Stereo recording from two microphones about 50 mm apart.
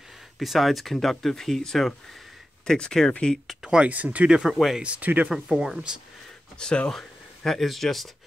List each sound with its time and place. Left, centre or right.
0.4 s speech: centre
3.6 s speech: centre
3.9 s speech: right
4.3 s speech: centre
4.8 s speech: right
5.3 s speech: centre
6.6 s speech: centre
6.9 s speech: centre